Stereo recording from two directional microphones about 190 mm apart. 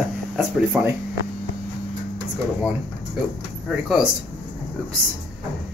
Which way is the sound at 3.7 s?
5° right (ahead or behind).